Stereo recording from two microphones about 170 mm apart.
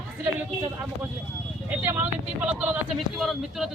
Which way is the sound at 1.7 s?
10° right (ahead or behind).